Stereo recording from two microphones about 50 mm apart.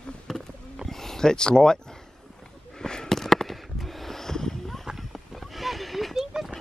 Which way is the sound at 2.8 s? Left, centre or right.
Centre.